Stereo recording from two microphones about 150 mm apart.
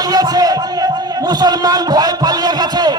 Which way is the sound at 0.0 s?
25° right (ahead or behind).